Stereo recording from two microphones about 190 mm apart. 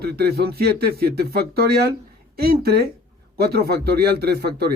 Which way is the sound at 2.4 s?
55° right (ahead or behind).